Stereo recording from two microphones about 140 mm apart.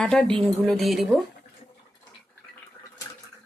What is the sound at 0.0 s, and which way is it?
Speech, 5° left (ahead or behind).